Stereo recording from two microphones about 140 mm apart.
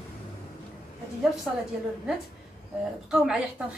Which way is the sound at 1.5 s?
5° right (ahead or behind).